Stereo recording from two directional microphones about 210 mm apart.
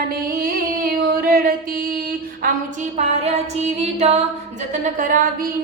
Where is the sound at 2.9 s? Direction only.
30° right (ahead or behind).